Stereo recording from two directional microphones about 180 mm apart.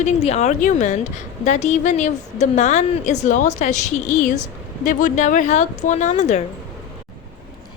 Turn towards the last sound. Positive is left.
turn(degrees=40)  # may be behind; listen again after turning